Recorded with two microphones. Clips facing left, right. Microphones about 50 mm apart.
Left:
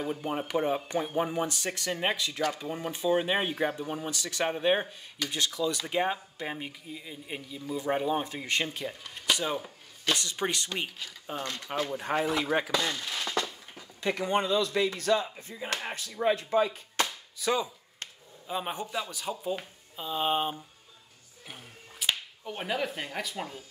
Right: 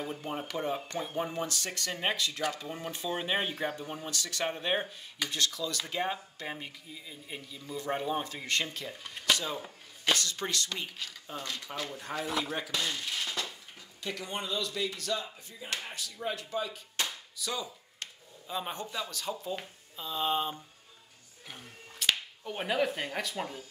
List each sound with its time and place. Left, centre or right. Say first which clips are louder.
0.0 s speech: left 4 dB; centre
9.3 s a sound: even; centre
10.1 s speech: left 2 dB; left
11.2 s speech: left 5 dB; left
13.4 s a sound: left 5 dB; left
14.7 s speech: left 7 dB; left
15.6 s speech: left 4 dB; left
16.3 s chop: left 9 dB; left
18.5 s speech: left 3 dB; centre
21.5 s whip: left 1 dB; centre